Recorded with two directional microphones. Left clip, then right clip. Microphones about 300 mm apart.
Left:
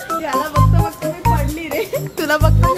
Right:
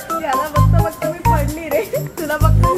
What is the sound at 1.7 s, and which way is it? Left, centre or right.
Music, left.